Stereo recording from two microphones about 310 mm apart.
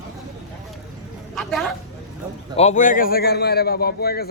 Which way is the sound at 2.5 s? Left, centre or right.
Left.